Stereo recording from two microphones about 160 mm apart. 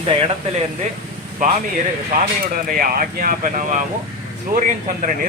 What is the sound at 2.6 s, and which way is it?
Speech, 65° right (ahead or behind).